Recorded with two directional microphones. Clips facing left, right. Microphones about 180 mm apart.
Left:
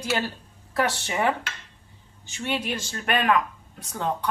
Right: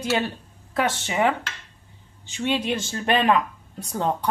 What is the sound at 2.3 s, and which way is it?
Speech, 25° right (ahead or behind).